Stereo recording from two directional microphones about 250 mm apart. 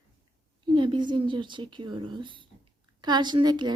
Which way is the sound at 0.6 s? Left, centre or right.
Centre.